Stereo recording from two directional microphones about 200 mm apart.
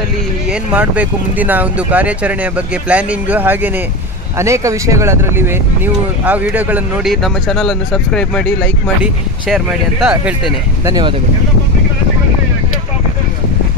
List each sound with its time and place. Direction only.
0.5 s speech: 5° right (ahead or behind)
10.9 s speech: 20° right (ahead or behind)